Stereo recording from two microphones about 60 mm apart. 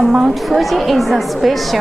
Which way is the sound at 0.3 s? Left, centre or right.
Centre.